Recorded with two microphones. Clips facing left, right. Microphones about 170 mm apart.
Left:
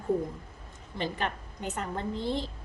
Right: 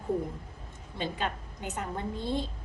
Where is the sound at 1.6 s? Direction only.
10° right (ahead or behind).